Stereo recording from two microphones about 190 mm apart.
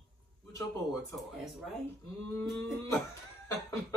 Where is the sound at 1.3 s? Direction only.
Centre (ahead or behind).